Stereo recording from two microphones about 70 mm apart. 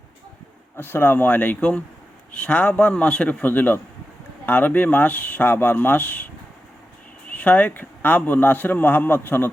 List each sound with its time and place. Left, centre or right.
0.8 s a man's voice: left
7.3 s a man's voice: left